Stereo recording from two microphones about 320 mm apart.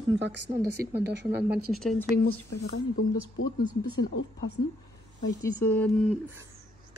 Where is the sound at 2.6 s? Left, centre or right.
Left.